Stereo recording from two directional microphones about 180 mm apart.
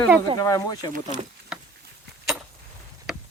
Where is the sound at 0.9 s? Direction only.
40° right (ahead or behind).